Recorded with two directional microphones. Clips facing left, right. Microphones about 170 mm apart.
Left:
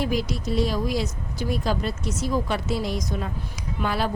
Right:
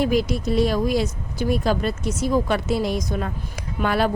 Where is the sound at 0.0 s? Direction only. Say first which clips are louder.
Right 5 dB; 55° right (ahead or behind).